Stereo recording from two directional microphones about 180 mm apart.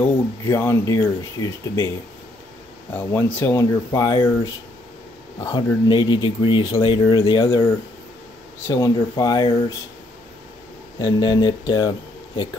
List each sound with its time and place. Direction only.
0.5 s speech: 15° left (ahead or behind)
2.9 s speech: 10° left (ahead or behind)
5.4 s speech: 20° left (ahead or behind)
8.6 s speech: 20° left (ahead or behind)
11.0 s speech: 25° left (ahead or behind)